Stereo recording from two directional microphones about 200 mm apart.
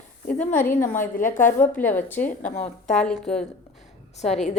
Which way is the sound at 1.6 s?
10° left (ahead or behind).